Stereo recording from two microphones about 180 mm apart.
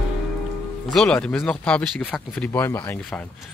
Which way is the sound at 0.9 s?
5° left (ahead or behind).